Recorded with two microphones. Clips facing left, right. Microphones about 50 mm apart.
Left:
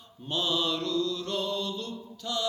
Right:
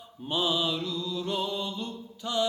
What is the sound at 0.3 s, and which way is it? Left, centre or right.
Mantra, centre.